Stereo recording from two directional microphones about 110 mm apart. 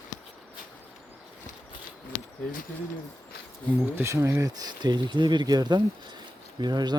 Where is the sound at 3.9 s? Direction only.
25° right (ahead or behind).